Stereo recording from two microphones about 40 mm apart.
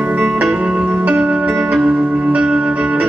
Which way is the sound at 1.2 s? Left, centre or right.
Right.